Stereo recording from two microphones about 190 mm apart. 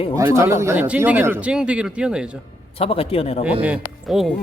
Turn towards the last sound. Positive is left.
turn(degrees=0)  # may be behind; listen again after turning